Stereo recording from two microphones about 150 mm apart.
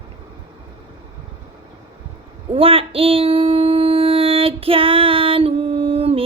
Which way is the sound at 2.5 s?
40° right (ahead or behind).